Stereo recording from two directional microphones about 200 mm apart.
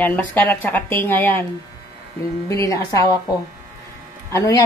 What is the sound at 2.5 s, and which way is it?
Speech, 15° left (ahead or behind).